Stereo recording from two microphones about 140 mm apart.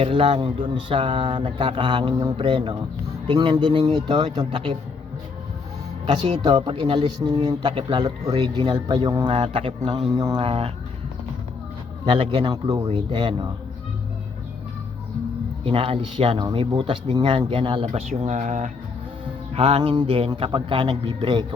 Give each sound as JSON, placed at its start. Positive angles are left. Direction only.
{"t": 0.0, "sound": "speech", "side_deg": -40}
{"t": 6.1, "sound": "speech", "side_deg": -30}
{"t": 9.3, "sound": "speech", "side_deg": -45}
{"t": 10.1, "sound": "speech", "side_deg": -25}
{"t": 10.4, "sound": "speech", "side_deg": -45}
{"t": 12.0, "sound": "speech", "side_deg": -40}
{"t": 15.6, "sound": "speech", "side_deg": -40}
{"t": 18.2, "sound": "speech", "side_deg": -55}
{"t": 19.5, "sound": "speech", "side_deg": -45}